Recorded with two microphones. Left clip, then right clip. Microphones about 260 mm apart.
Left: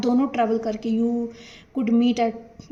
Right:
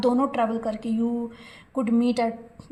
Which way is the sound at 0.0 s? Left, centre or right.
Right.